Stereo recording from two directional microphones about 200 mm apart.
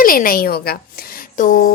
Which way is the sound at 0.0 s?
45° left (ahead or behind).